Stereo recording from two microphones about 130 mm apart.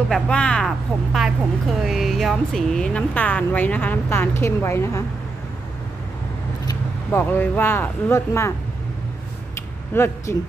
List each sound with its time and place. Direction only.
0.1 s speech: 5° left (ahead or behind)
7.1 s speech: 15° left (ahead or behind)
9.9 s speech: 20° left (ahead or behind)